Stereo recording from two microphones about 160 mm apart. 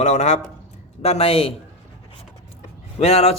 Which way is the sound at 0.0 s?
45° left (ahead or behind).